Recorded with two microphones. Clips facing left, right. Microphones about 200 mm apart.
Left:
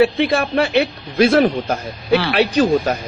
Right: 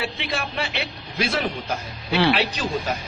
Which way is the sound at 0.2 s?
55° left (ahead or behind).